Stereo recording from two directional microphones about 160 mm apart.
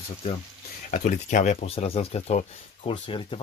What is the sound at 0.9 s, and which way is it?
Speech, 50° left (ahead or behind).